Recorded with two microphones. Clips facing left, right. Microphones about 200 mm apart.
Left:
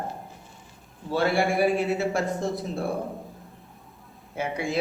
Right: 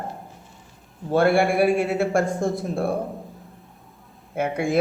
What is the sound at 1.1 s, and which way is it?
A man's voice, 55° right (ahead or behind).